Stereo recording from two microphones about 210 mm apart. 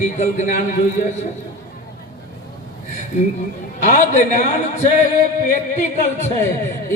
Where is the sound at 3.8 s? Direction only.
35° left (ahead or behind).